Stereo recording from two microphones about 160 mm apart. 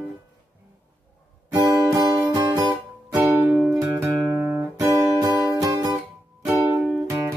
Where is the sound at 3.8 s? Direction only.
15° right (ahead or behind).